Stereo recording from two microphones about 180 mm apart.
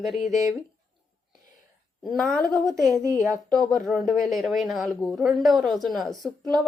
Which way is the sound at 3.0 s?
15° right (ahead or behind).